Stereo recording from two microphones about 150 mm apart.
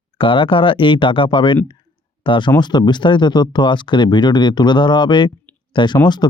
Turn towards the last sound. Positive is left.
turn(degrees=30)  # may be behind; listen again after turning